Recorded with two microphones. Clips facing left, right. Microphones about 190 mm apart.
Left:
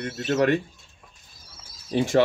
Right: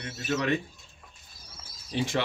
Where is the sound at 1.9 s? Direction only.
45° left (ahead or behind).